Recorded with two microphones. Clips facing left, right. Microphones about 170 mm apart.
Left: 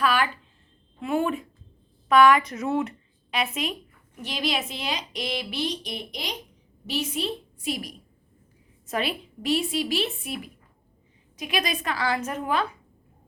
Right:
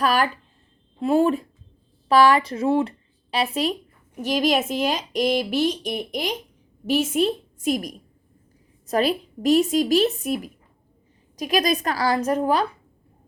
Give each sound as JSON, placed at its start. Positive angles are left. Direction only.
{"t": 0.0, "sound": "a woman's voice", "side_deg": -40}